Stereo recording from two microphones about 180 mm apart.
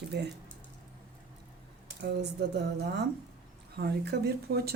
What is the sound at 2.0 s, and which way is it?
Speech, 70° right (ahead or behind).